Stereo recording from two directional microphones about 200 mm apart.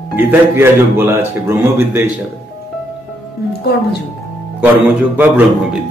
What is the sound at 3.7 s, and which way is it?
Speech, 50° left (ahead or behind).